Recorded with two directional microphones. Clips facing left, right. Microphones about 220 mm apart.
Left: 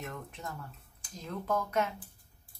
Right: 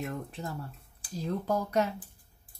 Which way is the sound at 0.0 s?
30° right (ahead or behind).